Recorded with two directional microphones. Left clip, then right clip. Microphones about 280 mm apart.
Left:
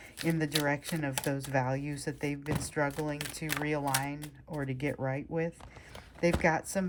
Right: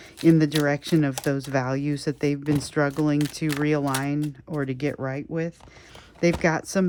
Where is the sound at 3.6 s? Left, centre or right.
Centre.